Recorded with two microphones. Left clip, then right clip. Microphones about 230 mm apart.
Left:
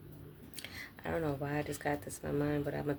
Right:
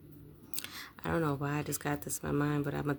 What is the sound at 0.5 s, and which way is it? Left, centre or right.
Speech, right.